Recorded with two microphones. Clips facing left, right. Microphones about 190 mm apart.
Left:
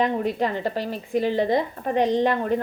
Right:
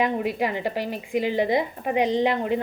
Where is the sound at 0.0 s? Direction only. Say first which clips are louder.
Left 1 dB; 10° right (ahead or behind).